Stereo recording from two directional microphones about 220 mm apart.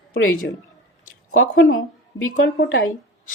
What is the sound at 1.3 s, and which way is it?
Speech, 65° left (ahead or behind).